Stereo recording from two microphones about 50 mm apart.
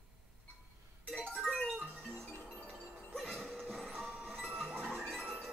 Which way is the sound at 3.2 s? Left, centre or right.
Centre.